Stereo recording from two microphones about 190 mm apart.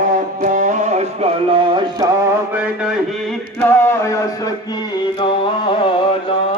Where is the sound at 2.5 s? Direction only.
5° right (ahead or behind); by 5.9 s 25° left (ahead or behind).